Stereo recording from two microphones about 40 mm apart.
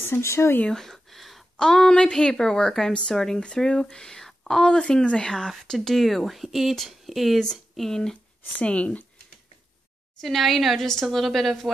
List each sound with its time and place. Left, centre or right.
0.0 s speech: left
0.7 s a sound: centre
1.6 s speech: centre
2.9 s speech: left
3.2 s speech: centre
5.9 s a woman's voice: centre
7.7 s speech: centre
8.6 s speech: left
10.2 s a woman's voice: centre